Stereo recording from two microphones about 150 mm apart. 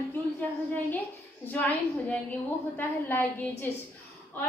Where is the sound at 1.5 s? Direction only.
10° left (ahead or behind).